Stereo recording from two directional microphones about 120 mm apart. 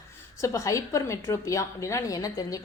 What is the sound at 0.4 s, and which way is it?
A woman's voice, 25° left (ahead or behind).